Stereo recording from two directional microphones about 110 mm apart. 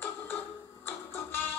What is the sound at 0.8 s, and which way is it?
Music, 15° left (ahead or behind).